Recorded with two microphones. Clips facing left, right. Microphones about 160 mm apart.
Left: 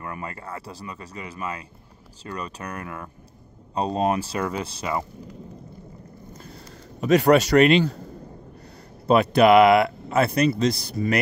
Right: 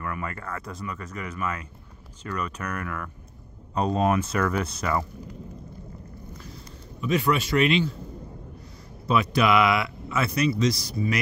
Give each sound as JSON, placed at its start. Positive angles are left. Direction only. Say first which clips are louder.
{"t": 0.0, "sound": "speech", "louder": "right 1 dB", "side_deg": 25}
{"t": 6.3, "sound": "a sound", "louder": "left 1 dB", "side_deg": 50}
{"t": 7.0, "sound": "a man's voice", "louder": "left 7 dB", "side_deg": 75}
{"t": 9.1, "sound": "speech", "louder": "left 6 dB", "side_deg": 55}